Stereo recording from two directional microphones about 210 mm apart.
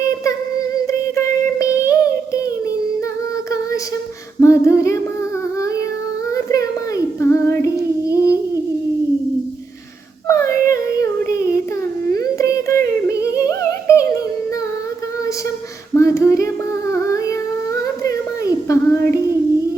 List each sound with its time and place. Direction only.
0.9 s child singing: 15° left (ahead or behind)
4.4 s a sound: 15° left (ahead or behind)
6.3 s child singing: 15° left (ahead or behind)
8.1 s humming: 15° left (ahead or behind)
10.2 s yodeling: 15° left (ahead or behind)
11.2 s child singing: 15° left (ahead or behind)
12.1 s music: 15° left (ahead or behind)
16.0 s child singing: 15° left (ahead or behind)
17.8 s a sound: 15° left (ahead or behind)